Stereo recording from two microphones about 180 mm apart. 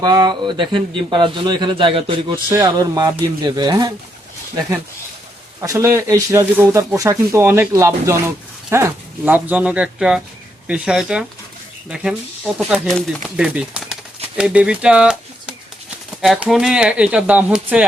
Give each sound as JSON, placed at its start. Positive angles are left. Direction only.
{"t": 0.0, "sound": "a man's voice", "side_deg": -20}
{"t": 5.5, "sound": "speech", "side_deg": -20}
{"t": 12.5, "sound": "speech", "side_deg": -5}